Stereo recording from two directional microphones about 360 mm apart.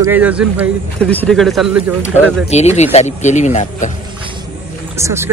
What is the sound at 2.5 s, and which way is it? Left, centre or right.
Speech, centre.